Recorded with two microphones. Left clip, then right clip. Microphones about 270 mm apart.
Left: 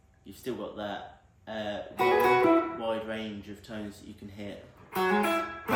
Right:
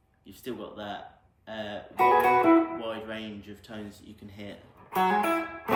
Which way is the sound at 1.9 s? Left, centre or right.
Right.